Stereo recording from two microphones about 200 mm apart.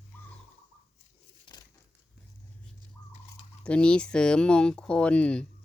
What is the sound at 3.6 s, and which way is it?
Speech, 5° left (ahead or behind).